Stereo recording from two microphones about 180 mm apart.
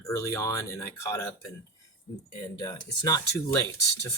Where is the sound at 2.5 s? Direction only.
20° left (ahead or behind).